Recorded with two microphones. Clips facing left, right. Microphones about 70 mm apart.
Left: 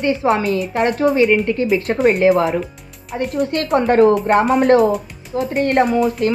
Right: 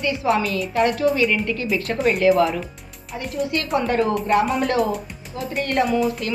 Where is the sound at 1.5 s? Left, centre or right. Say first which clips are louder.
Left 6 dB; left.